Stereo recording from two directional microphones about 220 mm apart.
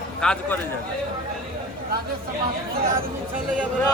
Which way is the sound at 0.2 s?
5° left (ahead or behind).